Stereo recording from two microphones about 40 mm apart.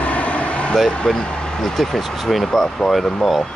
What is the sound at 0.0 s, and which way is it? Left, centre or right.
Vehicle, left.